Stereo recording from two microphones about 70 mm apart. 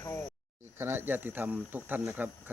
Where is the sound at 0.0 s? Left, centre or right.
Left.